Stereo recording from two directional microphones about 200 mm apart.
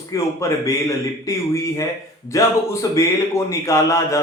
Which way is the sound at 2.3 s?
15° left (ahead or behind).